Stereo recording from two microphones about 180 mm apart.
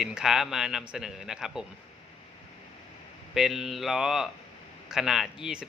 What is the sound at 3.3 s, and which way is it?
Speech, centre (ahead or behind).